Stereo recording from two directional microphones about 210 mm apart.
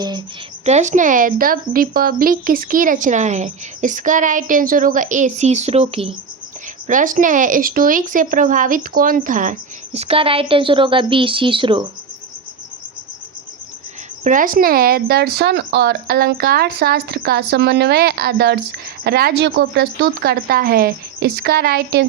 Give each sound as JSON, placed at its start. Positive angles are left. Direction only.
{"t": 0.6, "sound": "a woman's voice", "side_deg": -30}
{"t": 6.8, "sound": "a woman's voice", "side_deg": -40}
{"t": 14.3, "sound": "speech", "side_deg": -40}